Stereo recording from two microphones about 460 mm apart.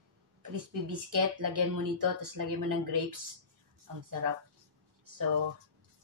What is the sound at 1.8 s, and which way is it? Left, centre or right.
Speech, right.